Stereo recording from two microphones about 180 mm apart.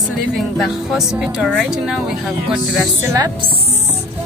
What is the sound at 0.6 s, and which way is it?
Speech, centre (ahead or behind).